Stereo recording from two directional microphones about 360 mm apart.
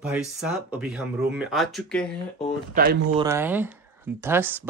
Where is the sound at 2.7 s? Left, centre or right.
Right.